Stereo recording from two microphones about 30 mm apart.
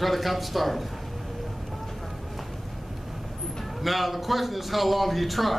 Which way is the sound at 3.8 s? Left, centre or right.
Centre.